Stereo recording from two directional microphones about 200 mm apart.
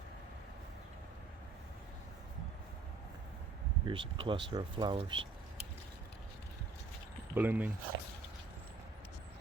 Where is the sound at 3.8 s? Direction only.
25° right (ahead or behind).